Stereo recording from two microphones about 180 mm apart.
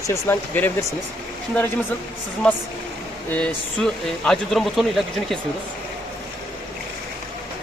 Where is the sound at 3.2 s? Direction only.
5° left (ahead or behind).